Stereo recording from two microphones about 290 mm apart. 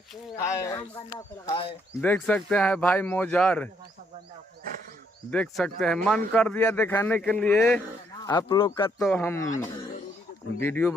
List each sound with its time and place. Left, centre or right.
0.3 s speech: centre
5.3 s speech: centre
8.2 s speech: centre
9.0 s speech: centre
10.6 s speech: centre